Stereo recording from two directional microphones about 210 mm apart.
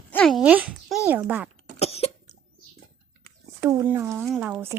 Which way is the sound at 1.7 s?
30° left (ahead or behind).